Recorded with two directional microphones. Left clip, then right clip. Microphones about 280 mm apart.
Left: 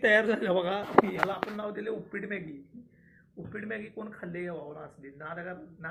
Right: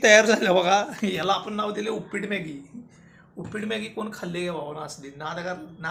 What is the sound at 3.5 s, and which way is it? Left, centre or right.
A man's voice, centre.